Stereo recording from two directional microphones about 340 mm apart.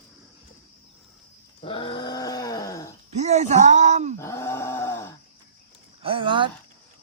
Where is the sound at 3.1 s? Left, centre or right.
Centre.